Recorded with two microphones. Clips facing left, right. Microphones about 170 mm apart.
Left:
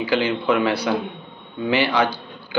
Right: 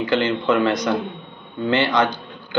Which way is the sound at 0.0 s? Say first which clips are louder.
Right 1 dB; 10° left (ahead or behind).